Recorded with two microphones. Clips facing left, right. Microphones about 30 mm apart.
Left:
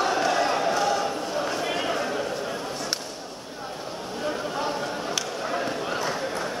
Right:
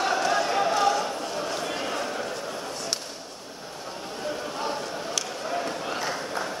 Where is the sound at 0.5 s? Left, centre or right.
Centre.